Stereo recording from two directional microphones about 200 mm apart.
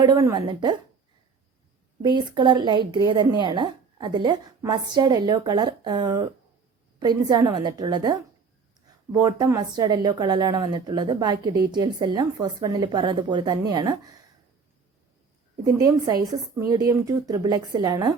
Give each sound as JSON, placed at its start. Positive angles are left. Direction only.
{"t": 0.0, "sound": "a woman's voice", "side_deg": -15}
{"t": 2.0, "sound": "a woman's voice", "side_deg": -20}
{"t": 15.6, "sound": "a woman's voice", "side_deg": -15}